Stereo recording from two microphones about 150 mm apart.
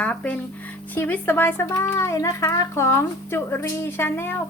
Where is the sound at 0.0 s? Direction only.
10° left (ahead or behind).